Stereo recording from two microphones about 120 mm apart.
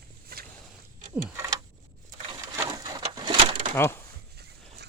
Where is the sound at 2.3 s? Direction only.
30° right (ahead or behind).